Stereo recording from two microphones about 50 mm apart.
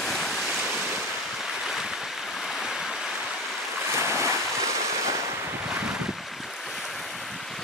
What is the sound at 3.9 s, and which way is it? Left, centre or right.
Waves, right.